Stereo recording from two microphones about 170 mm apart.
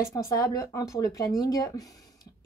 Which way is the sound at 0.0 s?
20° left (ahead or behind).